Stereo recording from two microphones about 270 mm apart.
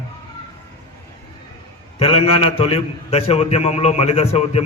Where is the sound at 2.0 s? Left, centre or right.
Left.